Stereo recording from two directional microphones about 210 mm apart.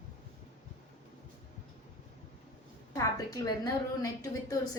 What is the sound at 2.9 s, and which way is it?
A woman's voice, 15° left (ahead or behind).